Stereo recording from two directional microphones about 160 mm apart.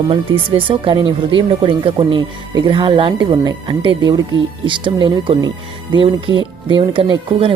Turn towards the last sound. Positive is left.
turn(degrees=-30)  # may be behind; listen again after turning